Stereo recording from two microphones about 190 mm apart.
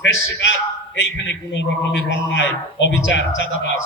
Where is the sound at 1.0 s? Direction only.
70° left (ahead or behind).